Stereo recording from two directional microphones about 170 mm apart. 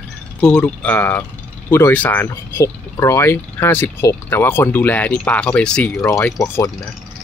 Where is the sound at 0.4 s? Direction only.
5° left (ahead or behind).